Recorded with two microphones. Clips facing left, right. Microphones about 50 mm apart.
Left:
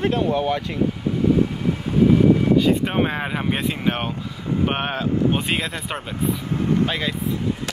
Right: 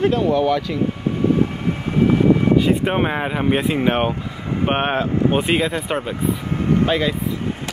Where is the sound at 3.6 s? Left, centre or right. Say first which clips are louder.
Right 5 dB; right.